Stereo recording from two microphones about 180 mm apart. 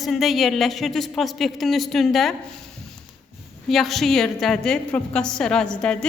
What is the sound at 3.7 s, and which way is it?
A woman's voice, centre (ahead or behind).